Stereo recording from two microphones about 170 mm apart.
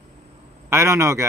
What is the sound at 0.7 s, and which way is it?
Speech, 15° right (ahead or behind).